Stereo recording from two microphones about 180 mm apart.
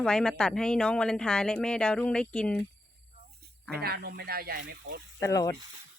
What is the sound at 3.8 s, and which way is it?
Speech, 60° right (ahead or behind).